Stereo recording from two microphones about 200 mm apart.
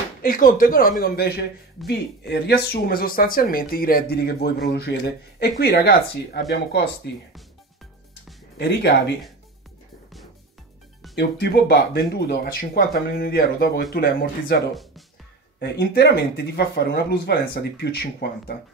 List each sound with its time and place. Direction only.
0.2 s speech: 45° left (ahead or behind); by 6.9 s 60° left (ahead or behind)
8.5 s speech: 55° left (ahead or behind)
11.1 s speech: 55° left (ahead or behind)
14.7 s speech: centre (ahead or behind)
15.6 s speech: 55° left (ahead or behind)